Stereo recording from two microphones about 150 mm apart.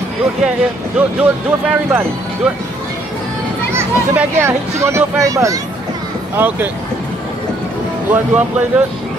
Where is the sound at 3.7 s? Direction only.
15° right (ahead or behind).